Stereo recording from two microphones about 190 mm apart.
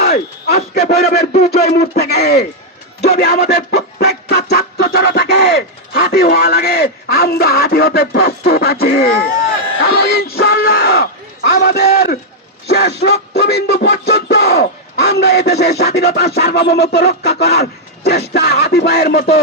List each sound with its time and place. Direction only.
0.0 s a man's voice: 55° left (ahead or behind)